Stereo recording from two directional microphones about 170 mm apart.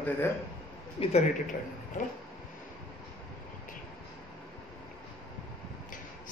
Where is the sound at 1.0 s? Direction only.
35° left (ahead or behind).